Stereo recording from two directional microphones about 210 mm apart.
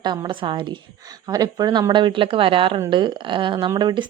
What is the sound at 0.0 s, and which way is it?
Speech, 20° right (ahead or behind).